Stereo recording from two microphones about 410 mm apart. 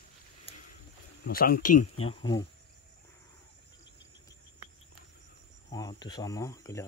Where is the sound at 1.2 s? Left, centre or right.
Left.